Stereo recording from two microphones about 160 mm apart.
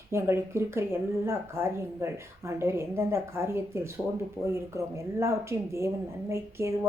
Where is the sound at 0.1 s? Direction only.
15° right (ahead or behind).